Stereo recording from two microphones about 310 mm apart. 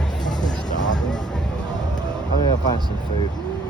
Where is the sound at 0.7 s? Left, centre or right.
Left.